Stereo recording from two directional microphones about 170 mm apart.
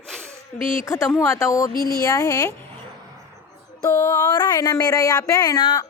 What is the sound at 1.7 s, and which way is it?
Speech, 60° left (ahead or behind).